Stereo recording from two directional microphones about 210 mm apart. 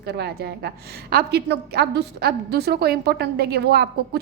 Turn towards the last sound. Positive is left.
turn(degrees=-50)  # may be behind; listen again after turning